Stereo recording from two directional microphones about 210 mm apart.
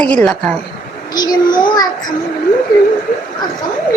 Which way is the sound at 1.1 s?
20° left (ahead or behind).